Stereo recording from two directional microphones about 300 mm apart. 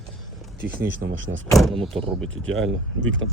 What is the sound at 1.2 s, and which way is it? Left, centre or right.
Speech, right.